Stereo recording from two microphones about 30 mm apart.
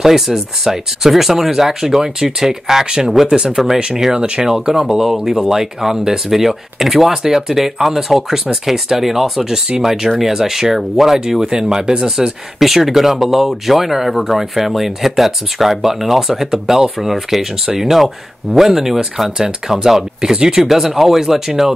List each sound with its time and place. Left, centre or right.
0.0 s speech: centre
5.0 s speech: centre
11.1 s speech: right
12.5 s speech: centre; by 20.6 s right
20.6 s speech: centre